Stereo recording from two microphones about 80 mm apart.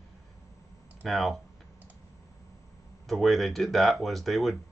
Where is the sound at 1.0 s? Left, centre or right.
Centre.